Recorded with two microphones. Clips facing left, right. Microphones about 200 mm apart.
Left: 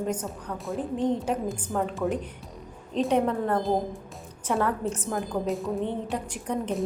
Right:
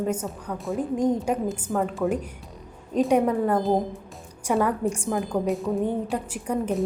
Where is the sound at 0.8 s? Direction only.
10° right (ahead or behind).